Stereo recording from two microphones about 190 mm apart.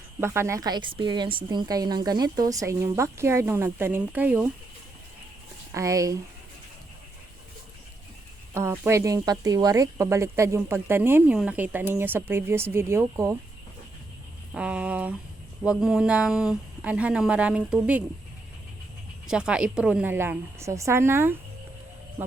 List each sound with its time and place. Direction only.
0.2 s speech: 15° right (ahead or behind)
5.7 s speech: 15° right (ahead or behind)
8.5 s speech: 15° right (ahead or behind)
14.5 s speech: 5° right (ahead or behind)
19.3 s speech: 5° right (ahead or behind)